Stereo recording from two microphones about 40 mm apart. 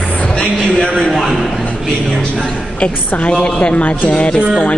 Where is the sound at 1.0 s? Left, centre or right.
Centre.